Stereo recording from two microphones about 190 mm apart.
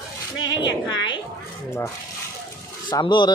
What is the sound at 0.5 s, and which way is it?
Speech, 20° left (ahead or behind).